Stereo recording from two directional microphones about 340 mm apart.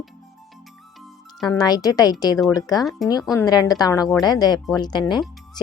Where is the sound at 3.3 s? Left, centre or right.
Centre.